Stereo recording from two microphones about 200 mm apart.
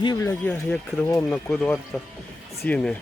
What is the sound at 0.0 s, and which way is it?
Speech, 20° left (ahead or behind).